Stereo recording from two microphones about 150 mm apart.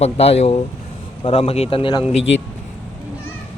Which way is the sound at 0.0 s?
45° left (ahead or behind).